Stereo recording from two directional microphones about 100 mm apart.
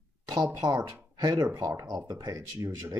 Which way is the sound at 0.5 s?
35° right (ahead or behind).